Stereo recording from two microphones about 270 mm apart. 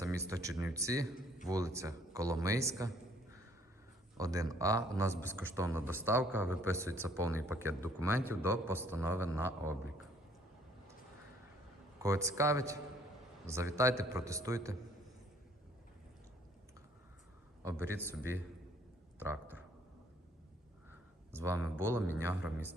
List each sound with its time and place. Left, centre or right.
0.3 s a man's voice: centre
4.2 s a man's voice: centre
12.0 s a man's voice: centre
17.6 s a man's voice: centre
21.3 s a man's voice: centre